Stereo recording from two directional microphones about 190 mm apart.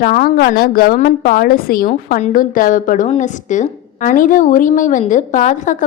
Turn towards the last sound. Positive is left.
turn(degrees=40)  # may be behind; listen again after turning